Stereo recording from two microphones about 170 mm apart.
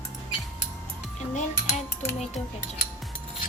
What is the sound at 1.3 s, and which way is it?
Cutlery, 45° left (ahead or behind).